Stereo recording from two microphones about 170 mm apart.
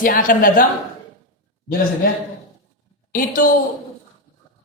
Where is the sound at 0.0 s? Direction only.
55° left (ahead or behind).